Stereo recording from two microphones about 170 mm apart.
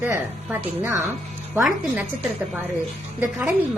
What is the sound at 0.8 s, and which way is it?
Speech, 15° right (ahead or behind).